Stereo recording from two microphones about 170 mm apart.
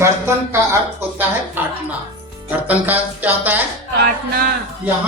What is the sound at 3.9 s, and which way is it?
Music, 65° right (ahead or behind).